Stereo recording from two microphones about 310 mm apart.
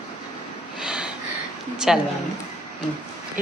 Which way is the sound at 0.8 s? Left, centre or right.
Centre.